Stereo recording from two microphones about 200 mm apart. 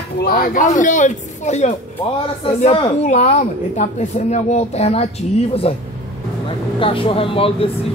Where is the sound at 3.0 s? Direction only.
35° left (ahead or behind).